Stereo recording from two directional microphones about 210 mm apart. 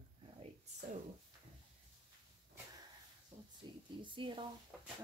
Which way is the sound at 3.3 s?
30° right (ahead or behind).